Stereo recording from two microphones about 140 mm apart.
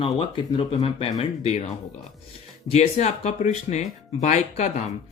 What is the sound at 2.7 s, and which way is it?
Speech, 50° left (ahead or behind).